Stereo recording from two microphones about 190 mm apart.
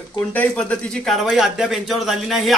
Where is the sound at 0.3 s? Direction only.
5° left (ahead or behind).